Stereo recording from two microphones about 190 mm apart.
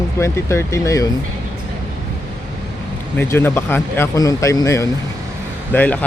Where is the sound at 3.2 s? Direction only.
10° left (ahead or behind).